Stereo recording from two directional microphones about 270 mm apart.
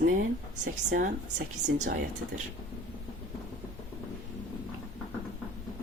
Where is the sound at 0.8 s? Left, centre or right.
Right.